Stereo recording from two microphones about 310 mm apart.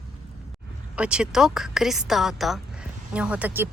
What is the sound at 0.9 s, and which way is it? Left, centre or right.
Speech, centre.